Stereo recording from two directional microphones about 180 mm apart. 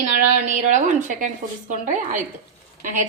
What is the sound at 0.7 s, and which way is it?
A woman's voice, 45° right (ahead or behind).